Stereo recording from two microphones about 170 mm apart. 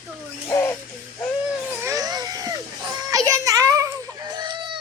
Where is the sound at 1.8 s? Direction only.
20° right (ahead or behind).